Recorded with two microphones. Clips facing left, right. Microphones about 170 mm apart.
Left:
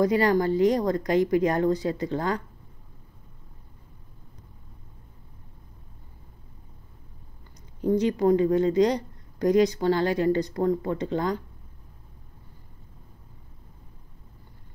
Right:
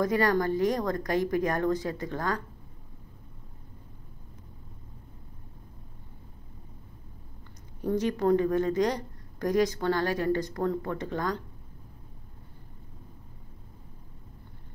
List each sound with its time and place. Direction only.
0.1 s a woman's voice: 15° left (ahead or behind)
8.1 s a woman's voice: 15° left (ahead or behind)